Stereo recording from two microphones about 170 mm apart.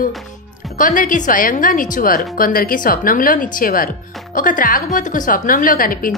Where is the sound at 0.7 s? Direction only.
50° left (ahead or behind).